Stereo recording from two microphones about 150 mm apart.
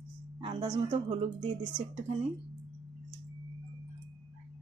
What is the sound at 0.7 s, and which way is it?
A woman's voice, 50° right (ahead or behind).